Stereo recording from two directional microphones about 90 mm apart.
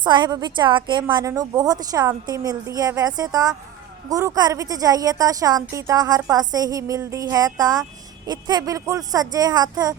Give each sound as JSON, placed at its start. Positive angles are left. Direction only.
{"t": 0.0, "sound": "a woman's voice", "side_deg": -55}
{"t": 1.2, "sound": "a woman's voice", "side_deg": -40}